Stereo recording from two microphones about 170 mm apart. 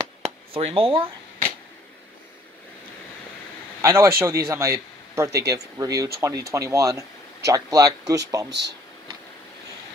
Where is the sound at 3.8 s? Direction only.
15° right (ahead or behind).